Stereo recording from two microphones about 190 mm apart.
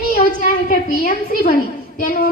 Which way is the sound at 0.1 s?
50° left (ahead or behind).